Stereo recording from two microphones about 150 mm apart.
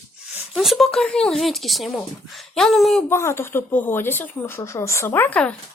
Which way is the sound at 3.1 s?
15° left (ahead or behind).